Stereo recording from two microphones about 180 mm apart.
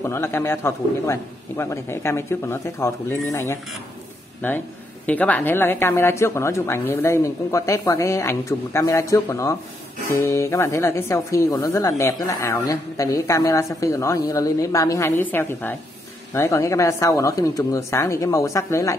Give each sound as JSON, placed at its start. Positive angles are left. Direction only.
{"t": 0.0, "sound": "speech", "side_deg": 15}